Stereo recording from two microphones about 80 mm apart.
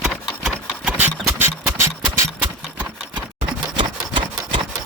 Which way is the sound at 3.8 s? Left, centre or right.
Right.